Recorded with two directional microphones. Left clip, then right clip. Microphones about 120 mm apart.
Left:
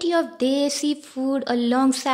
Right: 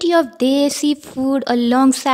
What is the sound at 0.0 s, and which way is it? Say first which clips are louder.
A woman's voice: right 6 dB; 50° right (ahead or behind).